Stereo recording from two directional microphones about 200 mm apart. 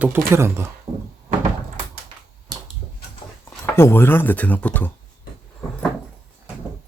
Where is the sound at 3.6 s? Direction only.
10° left (ahead or behind).